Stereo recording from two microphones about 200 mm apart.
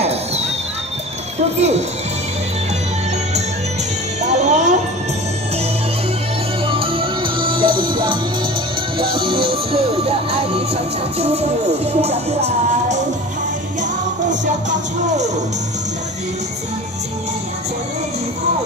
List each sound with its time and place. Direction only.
0.0 s fireworks: 30° right (ahead or behind)
1.6 s music: 30° right (ahead or behind)
4.2 s music: 35° right (ahead or behind)
6.7 s music: 25° right (ahead or behind)
7.3 s music: 45° right (ahead or behind)
7.9 s music: 25° right (ahead or behind)
8.9 s music: 50° right (ahead or behind)
10.7 s music: 30° right (ahead or behind)
14.3 s music: 40° right (ahead or behind)